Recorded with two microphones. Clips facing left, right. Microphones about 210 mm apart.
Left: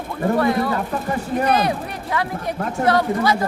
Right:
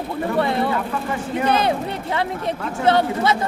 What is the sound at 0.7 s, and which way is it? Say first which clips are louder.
Speech: left 1 dB; 40° left (ahead or behind).